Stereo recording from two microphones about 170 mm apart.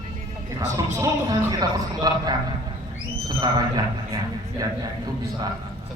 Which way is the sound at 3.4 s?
25° right (ahead or behind).